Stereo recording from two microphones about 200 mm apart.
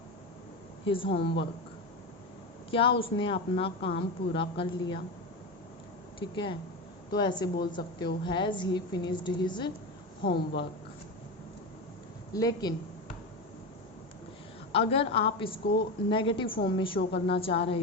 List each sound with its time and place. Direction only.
0.9 s a woman's voice: 25° left (ahead or behind)
1.2 s speech: 60° left (ahead or behind)
2.6 s a woman's voice: 25° left (ahead or behind)
6.1 s a woman's voice: 25° left (ahead or behind)
10.2 s speech: 55° left (ahead or behind)
12.3 s a woman's voice: 20° left (ahead or behind)
14.7 s a woman's voice: 30° left (ahead or behind)